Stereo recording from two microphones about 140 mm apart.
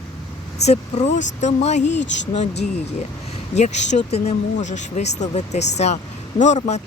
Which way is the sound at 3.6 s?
55° left (ahead or behind).